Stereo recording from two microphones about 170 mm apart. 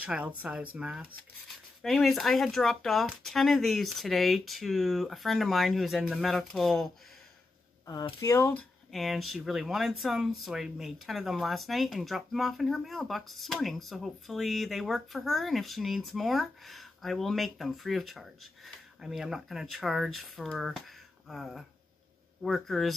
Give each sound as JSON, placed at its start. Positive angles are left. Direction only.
{"t": 0.0, "sound": "speech", "side_deg": -10}
{"t": 7.8, "sound": "speech", "side_deg": 20}
{"t": 8.9, "sound": "speech", "side_deg": 0}